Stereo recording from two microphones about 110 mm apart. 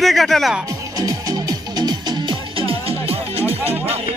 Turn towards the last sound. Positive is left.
turn(degrees=-65)  # may be behind; listen again after turning